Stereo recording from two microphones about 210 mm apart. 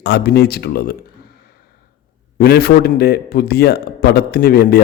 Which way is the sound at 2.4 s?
50° left (ahead or behind).